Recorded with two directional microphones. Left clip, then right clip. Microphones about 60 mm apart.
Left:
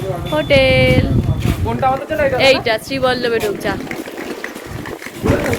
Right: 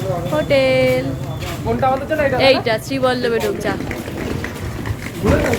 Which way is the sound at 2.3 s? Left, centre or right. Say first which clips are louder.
Left 2 dB; left.